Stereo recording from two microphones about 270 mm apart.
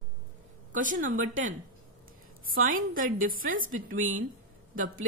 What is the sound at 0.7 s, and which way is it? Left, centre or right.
Speech, right.